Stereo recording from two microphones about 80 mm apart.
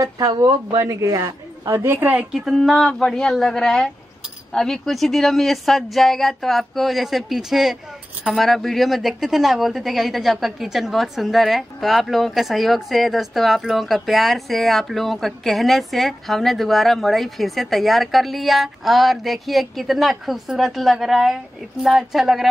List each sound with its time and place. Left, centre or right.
0.0 s a woman's voice: right
2.0 s speech: centre
2.3 s a woman's voice: centre